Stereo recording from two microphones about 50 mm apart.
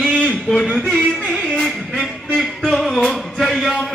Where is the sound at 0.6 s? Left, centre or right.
Centre.